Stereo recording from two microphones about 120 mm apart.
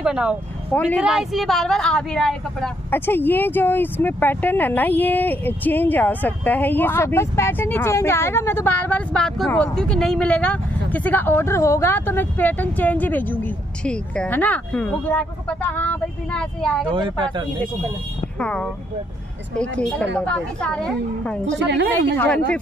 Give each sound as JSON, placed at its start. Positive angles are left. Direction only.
{"t": 0.0, "sound": "a woman's voice", "side_deg": -10}
{"t": 2.9, "sound": "speech", "side_deg": 15}
{"t": 16.9, "sound": "speech", "side_deg": -45}
{"t": 18.4, "sound": "speech", "side_deg": 10}